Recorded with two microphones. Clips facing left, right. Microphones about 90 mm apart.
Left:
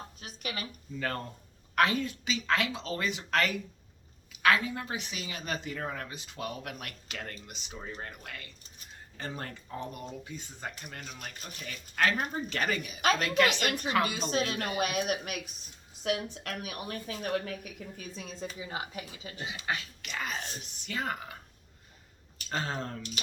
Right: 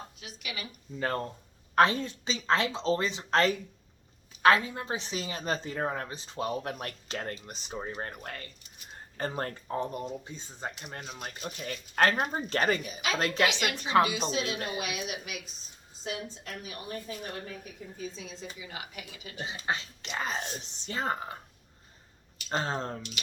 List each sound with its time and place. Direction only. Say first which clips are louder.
0.2 s a sound: left 4 dB; 40° left (ahead or behind)
0.9 s speech: right 3 dB; 30° right (ahead or behind)
13.4 s speech: left 1 dB; 45° left (ahead or behind)
16.0 s a woman's voice: left 5 dB; 70° left (ahead or behind); by 19.3 s 30° left (ahead or behind)
19.4 s speech: right 2 dB; 35° right (ahead or behind)
22.4 s speech: right 3 dB; 35° right (ahead or behind)